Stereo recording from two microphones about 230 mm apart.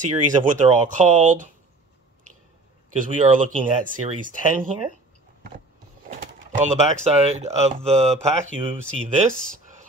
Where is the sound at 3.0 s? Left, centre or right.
Right.